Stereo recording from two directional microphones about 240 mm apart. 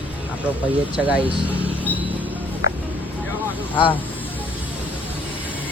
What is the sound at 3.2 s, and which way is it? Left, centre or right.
Vehicle, centre.